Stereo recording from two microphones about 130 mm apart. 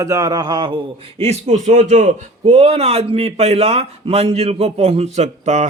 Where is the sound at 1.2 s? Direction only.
55° right (ahead or behind).